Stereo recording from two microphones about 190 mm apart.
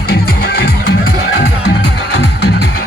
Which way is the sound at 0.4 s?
55° left (ahead or behind).